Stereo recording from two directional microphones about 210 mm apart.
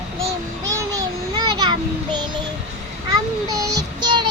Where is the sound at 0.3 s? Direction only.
15° right (ahead or behind).